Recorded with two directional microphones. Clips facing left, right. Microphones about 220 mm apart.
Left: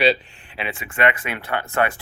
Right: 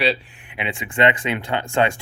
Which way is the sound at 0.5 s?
15° right (ahead or behind).